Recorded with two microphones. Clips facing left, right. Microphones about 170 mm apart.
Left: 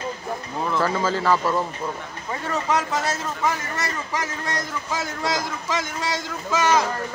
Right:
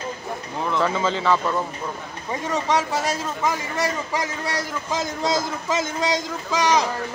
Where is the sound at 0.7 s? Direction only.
Centre (ahead or behind).